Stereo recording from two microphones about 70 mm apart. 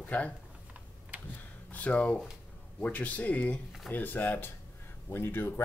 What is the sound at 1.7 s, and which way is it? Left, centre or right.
Speech, left.